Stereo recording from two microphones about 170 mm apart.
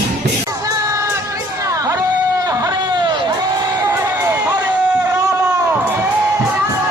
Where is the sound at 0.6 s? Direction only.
15° right (ahead or behind).